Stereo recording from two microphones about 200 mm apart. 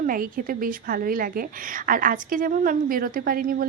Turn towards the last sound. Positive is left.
turn(degrees=-45)  # may be behind; listen again after turning